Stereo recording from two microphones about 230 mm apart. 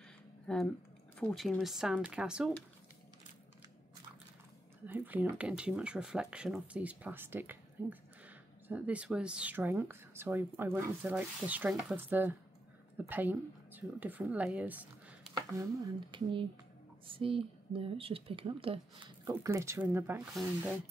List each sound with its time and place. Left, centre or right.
0.5 s speech: centre
4.8 s a woman's voice: centre